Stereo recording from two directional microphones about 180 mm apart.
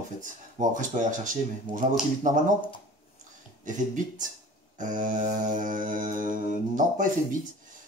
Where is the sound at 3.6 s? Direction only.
45° right (ahead or behind).